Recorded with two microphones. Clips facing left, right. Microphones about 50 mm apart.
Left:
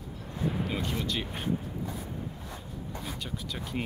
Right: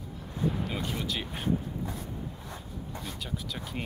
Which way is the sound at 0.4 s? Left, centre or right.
Centre.